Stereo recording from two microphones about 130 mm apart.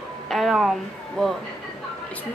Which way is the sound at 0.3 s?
Centre (ahead or behind).